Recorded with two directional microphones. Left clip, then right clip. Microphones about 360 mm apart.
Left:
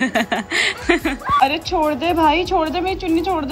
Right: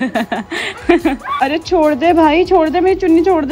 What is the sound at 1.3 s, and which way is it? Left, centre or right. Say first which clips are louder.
Speech: right 1 dB; right.